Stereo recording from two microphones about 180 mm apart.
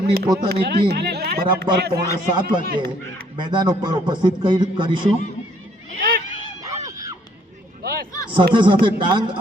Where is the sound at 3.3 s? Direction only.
25° right (ahead or behind).